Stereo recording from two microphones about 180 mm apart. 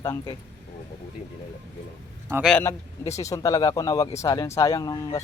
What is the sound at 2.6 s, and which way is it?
Speech, 15° left (ahead or behind).